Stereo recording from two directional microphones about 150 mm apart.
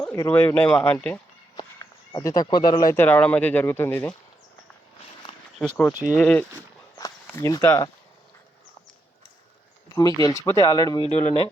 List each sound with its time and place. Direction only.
0.0 s speech: 15° left (ahead or behind)
1.5 s a sound: 25° left (ahead or behind)
2.9 s speech: 15° left (ahead or behind)
5.5 s speech: 10° left (ahead or behind)
7.3 s speech: 20° left (ahead or behind)
9.9 s speech: 25° left (ahead or behind)
11.0 s speech: 40° left (ahead or behind)